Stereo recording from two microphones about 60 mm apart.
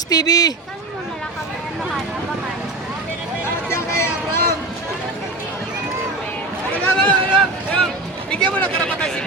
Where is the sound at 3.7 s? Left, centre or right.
Left.